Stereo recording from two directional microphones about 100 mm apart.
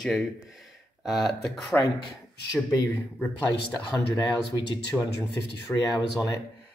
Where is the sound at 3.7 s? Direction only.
45° left (ahead or behind).